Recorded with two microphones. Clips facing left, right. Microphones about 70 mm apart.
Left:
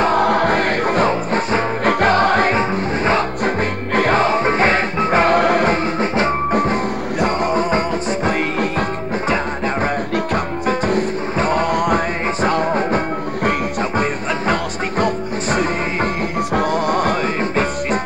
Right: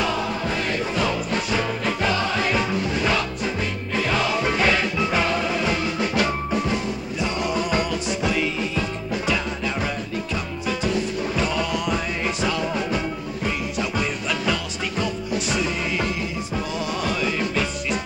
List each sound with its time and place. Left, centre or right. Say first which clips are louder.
0.0 s music: left 10 dB; left
1.9 s music: left 11 dB; left
2.5 s music: left 5 dB; left
3.4 s music: left 7 dB; left
6.5 s music: left 6 dB; left
10.7 s music: left 6 dB; left